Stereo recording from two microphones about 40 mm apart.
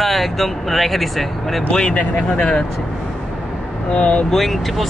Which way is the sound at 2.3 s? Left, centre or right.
Left.